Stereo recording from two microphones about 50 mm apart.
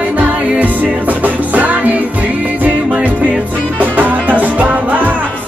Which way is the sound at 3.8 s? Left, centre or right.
Right.